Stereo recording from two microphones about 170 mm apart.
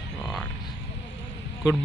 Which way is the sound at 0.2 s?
5° left (ahead or behind).